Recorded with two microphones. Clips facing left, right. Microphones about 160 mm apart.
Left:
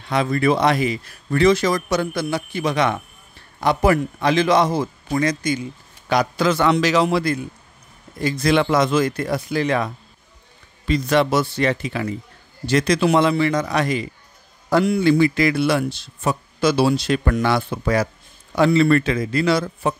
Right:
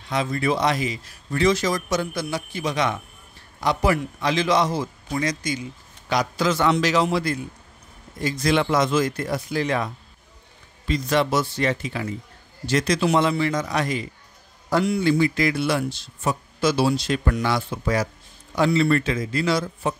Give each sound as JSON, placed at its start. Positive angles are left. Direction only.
{"t": 0.1, "sound": "a man's voice", "side_deg": 60}
{"t": 10.9, "sound": "a man's voice", "side_deg": 65}